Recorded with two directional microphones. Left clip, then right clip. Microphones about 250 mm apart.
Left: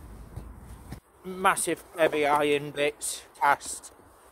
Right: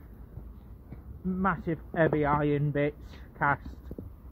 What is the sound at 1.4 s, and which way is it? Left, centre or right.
Speech, centre.